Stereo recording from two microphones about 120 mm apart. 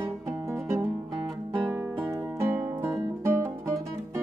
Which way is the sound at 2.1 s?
25° right (ahead or behind).